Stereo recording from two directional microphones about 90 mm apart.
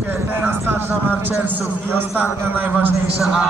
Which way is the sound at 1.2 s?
20° right (ahead or behind).